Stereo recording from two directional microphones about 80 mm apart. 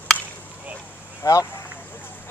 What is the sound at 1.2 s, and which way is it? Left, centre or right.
Speech, left.